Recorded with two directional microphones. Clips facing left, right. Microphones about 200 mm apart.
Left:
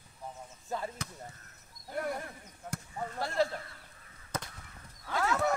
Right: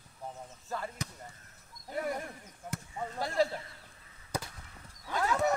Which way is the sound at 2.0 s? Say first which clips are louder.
Right 1 dB; 10° right (ahead or behind).